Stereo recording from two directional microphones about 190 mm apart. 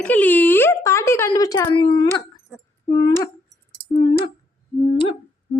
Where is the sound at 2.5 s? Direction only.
Centre (ahead or behind).